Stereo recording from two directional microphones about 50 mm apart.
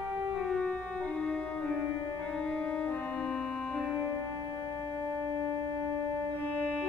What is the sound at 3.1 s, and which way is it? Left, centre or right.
Organ, centre.